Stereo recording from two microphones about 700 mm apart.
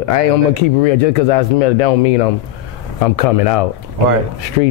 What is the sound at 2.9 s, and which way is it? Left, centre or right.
Speech, left.